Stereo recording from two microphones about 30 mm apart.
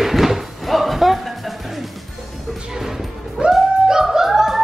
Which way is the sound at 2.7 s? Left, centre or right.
Centre.